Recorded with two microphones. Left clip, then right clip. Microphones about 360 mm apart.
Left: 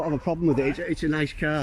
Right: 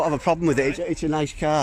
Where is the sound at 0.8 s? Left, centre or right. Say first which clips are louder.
Right 2 dB; centre.